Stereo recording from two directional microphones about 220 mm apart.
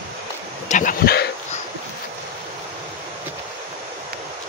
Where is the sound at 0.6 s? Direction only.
35° left (ahead or behind).